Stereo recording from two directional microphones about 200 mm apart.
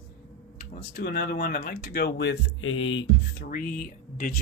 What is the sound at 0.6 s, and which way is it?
Speech, 50° left (ahead or behind).